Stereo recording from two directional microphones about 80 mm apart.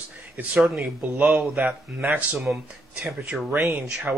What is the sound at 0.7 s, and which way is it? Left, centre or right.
A man's voice, right.